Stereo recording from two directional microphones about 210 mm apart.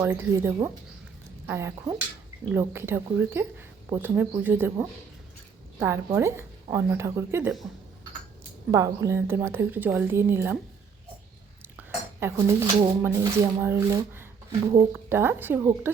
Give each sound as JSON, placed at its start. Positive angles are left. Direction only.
{"t": 0.0, "sound": "speech", "side_deg": -10}
{"t": 8.7, "sound": "speech", "side_deg": -15}
{"t": 11.6, "sound": "speech", "side_deg": -10}